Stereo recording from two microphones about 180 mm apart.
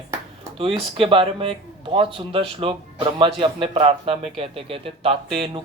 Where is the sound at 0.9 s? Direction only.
30° right (ahead or behind).